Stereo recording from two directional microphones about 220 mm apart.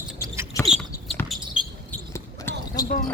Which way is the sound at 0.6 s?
Centre (ahead or behind).